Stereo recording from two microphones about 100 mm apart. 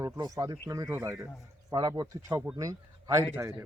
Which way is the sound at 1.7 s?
40° right (ahead or behind).